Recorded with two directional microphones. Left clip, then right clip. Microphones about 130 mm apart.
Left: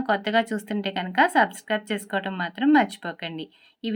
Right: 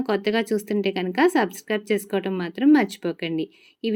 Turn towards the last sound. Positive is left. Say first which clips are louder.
# right 6 dB
turn(degrees=-50)  # may be behind; listen again after turning